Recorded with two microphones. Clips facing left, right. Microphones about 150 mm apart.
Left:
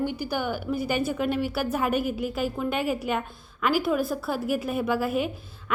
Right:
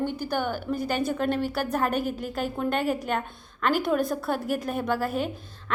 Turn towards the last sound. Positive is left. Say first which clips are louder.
# left 1 dB
turn(degrees=10)  # may be behind; listen again after turning